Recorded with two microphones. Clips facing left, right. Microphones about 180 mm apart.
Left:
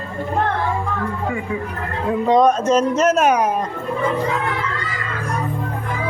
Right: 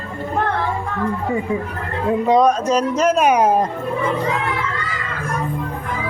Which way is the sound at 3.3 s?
30° right (ahead or behind).